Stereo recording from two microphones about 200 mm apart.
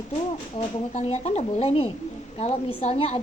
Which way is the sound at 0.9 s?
30° left (ahead or behind).